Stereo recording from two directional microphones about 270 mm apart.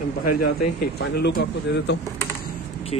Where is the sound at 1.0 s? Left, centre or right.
Left.